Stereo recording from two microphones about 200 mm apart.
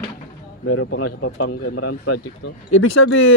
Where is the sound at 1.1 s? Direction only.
90° left.